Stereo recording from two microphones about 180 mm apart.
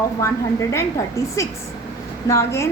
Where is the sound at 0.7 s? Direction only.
15° left (ahead or behind).